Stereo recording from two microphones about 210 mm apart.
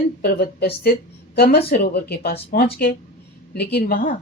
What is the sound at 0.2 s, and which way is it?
Speech, 45° left (ahead or behind).